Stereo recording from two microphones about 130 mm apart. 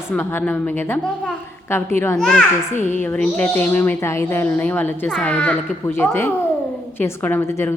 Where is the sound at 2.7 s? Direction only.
65° left (ahead or behind).